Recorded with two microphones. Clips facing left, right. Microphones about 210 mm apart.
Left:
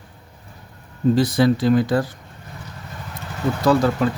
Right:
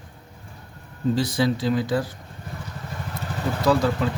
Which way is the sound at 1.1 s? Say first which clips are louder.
Left 5 dB; 55° left (ahead or behind).